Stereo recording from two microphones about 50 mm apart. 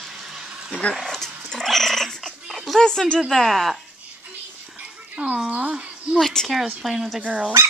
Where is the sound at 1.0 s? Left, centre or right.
Centre.